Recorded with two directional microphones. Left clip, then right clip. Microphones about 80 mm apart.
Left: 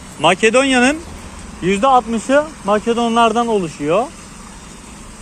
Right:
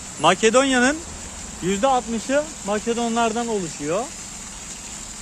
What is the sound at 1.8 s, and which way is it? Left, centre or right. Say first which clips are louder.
Speech: left 7 dB; centre.